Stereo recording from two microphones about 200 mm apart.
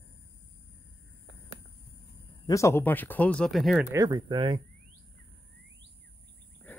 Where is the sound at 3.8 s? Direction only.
20° right (ahead or behind).